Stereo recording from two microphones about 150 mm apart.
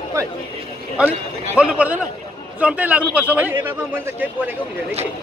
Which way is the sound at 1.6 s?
10° right (ahead or behind).